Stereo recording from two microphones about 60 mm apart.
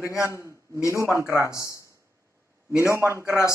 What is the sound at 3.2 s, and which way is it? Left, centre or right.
Speech, left.